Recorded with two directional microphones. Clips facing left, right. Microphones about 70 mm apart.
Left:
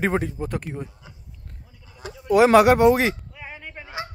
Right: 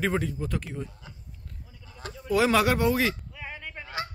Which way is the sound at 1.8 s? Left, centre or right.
Centre.